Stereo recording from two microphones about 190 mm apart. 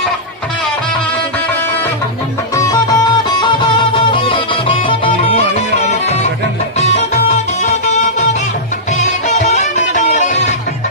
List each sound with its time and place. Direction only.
2.6 s music: 20° left (ahead or behind)
6.7 s music: 35° left (ahead or behind)